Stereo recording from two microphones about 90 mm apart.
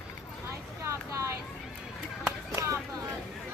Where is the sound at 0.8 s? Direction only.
35° right (ahead or behind).